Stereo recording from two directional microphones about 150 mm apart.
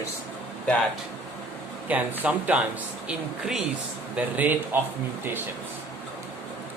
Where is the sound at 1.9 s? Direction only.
10° right (ahead or behind).